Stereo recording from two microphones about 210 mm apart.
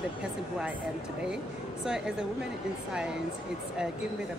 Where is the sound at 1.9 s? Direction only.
5° right (ahead or behind).